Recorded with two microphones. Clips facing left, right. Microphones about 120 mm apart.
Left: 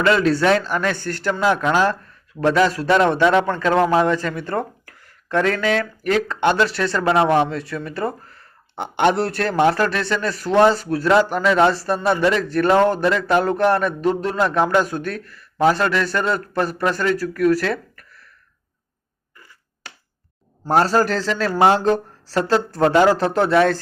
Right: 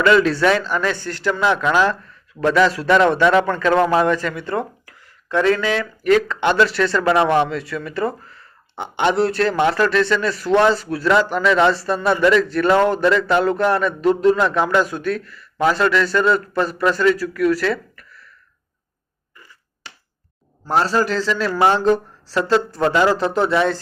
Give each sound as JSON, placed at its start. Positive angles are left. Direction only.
{"t": 0.0, "sound": "a man's voice", "side_deg": 35}
{"t": 4.4, "sound": "a man's voice", "side_deg": 45}
{"t": 20.7, "sound": "speech", "side_deg": 45}